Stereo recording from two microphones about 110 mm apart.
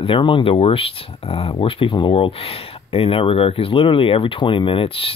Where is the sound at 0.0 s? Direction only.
50° left (ahead or behind).